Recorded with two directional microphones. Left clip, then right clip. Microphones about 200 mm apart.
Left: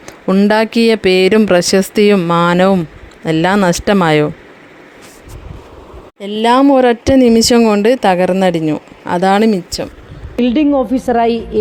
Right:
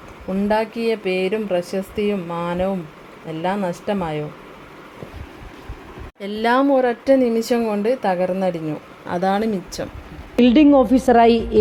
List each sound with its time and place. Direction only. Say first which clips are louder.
0.3 s speech: left 8 dB; 45° left (ahead or behind)
6.1 s speech: left 7 dB; 20° left (ahead or behind)
6.7 s speech: left 6 dB; 35° left (ahead or behind)
10.3 s a woman's voice: even; centre (ahead or behind)